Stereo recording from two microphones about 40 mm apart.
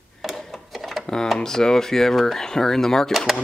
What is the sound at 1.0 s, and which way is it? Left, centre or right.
Speech, centre.